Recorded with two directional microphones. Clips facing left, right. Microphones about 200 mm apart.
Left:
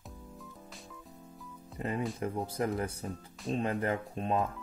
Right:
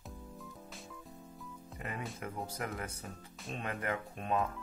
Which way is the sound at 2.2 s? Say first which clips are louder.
Left 6 dB; 30° left (ahead or behind).